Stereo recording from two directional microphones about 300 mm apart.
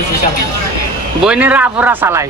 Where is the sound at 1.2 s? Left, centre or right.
Centre.